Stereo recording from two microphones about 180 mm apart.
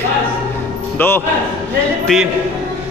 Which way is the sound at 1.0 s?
10° left (ahead or behind).